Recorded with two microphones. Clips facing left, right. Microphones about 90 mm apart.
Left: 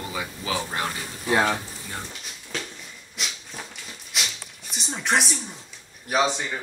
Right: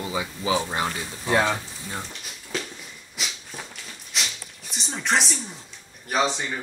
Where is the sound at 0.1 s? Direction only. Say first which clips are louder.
Right 5 dB; 20° right (ahead or behind).